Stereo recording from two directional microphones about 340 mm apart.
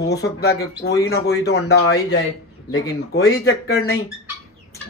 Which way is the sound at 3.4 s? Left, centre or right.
Left.